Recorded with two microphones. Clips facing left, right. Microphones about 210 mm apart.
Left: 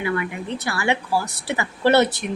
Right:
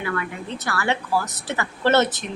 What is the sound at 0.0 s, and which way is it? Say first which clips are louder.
Speech: left 3 dB; 15° left (ahead or behind).